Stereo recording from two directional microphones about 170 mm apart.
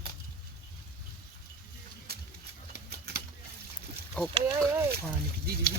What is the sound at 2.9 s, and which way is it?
Typewriter, 70° right (ahead or behind).